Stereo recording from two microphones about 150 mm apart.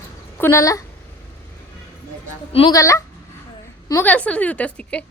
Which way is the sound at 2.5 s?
40° left (ahead or behind).